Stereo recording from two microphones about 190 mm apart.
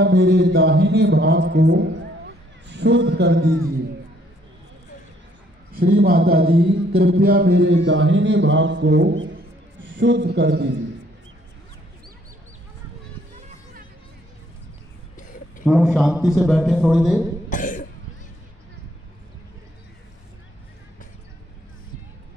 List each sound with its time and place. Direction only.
0.0 s a man's voice: 65° right (ahead or behind)
5.8 s a man's voice: 50° right (ahead or behind)
15.6 s a man's voice: 5° right (ahead or behind)
17.5 s cough: 45° left (ahead or behind)